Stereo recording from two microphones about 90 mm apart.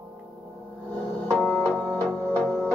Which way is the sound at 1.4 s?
20° left (ahead or behind).